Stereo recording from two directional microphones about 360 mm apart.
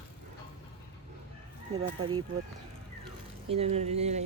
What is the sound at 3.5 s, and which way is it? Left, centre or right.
Speech, centre.